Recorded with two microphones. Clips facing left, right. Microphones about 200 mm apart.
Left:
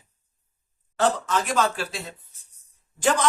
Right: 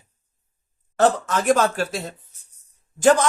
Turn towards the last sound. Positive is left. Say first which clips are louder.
# right 5 dB
turn(degrees=-45)  # may be behind; listen again after turning